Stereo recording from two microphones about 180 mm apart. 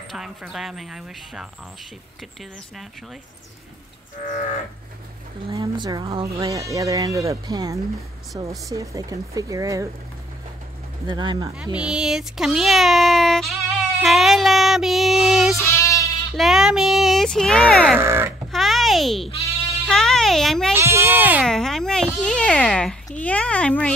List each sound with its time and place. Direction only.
0.1 s speech: centre (ahead or behind)
5.5 s speech: 25° right (ahead or behind)
6.3 s speech: 20° right (ahead or behind)
11.1 s speech: 25° right (ahead or behind)
11.7 s speech: 5° right (ahead or behind)
15.6 s sheep: 15° left (ahead or behind)
16.3 s speech: centre (ahead or behind)
17.9 s speech: 15° right (ahead or behind)
18.5 s a sound: centre (ahead or behind)
19.9 s a child's voice: 5° left (ahead or behind)
20.7 s speech: 15° right (ahead or behind)
21.5 s speech: centre (ahead or behind)